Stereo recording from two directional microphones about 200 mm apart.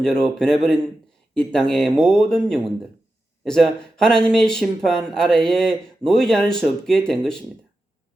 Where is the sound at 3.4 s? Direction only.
5° left (ahead or behind).